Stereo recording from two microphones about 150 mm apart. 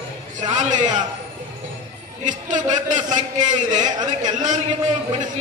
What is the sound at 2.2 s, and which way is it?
A man's voice, 55° right (ahead or behind).